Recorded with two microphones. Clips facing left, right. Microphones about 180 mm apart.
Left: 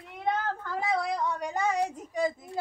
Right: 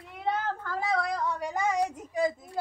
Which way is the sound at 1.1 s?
Centre (ahead or behind).